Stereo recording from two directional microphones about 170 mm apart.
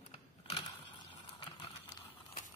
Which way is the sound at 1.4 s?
30° left (ahead or behind).